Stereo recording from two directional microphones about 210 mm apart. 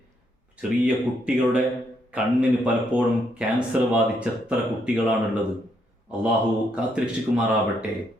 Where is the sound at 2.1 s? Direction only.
5° right (ahead or behind).